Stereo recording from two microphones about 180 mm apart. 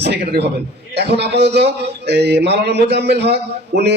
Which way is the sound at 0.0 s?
70° right (ahead or behind).